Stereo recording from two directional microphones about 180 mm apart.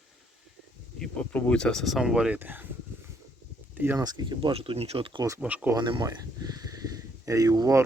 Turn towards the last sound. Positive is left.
turn(degrees=-20)  # may be behind; listen again after turning